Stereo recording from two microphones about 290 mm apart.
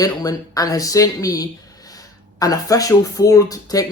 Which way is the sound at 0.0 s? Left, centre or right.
Centre.